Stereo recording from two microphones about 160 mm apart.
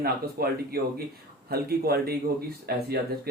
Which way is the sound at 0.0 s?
75° right (ahead or behind).